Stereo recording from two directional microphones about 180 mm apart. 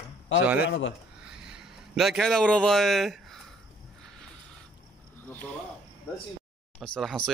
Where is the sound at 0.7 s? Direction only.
90° left.